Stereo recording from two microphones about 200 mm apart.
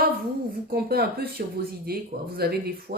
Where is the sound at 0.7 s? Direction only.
50° right (ahead or behind).